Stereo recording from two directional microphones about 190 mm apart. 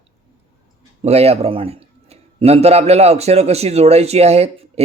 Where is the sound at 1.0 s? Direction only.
35° right (ahead or behind).